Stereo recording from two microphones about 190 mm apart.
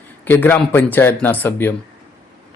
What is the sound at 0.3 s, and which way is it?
A man's voice, 10° left (ahead or behind).